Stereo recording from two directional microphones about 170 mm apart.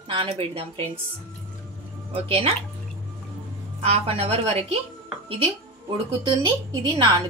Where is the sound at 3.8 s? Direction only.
35° right (ahead or behind).